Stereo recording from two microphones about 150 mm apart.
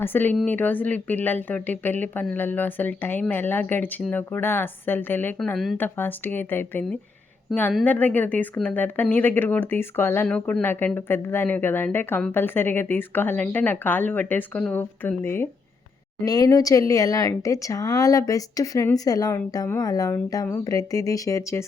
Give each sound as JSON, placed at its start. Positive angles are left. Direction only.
{"t": 0.0, "sound": "speech", "side_deg": 15}
{"t": 7.5, "sound": "speech", "side_deg": 0}
{"t": 7.9, "sound": "speech", "side_deg": 10}